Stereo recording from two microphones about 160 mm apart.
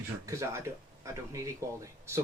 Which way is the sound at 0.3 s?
20° right (ahead or behind).